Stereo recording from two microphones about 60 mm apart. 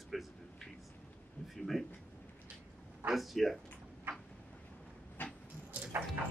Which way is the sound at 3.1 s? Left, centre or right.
Centre.